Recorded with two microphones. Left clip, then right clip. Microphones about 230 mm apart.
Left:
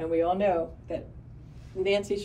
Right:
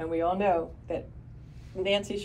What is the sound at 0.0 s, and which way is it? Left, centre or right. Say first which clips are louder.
Speech: left 2 dB; centre.